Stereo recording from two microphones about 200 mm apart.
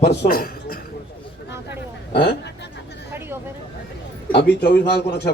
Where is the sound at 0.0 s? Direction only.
55° left (ahead or behind).